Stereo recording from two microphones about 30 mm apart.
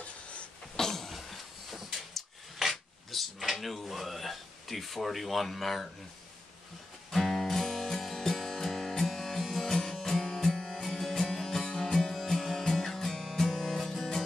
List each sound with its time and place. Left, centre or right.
0.0 s a sound: left
0.7 s a sound: centre
3.5 s speech: centre
7.1 s music: centre
10.2 s music: centre
11.6 s music: left
11.9 s music: centre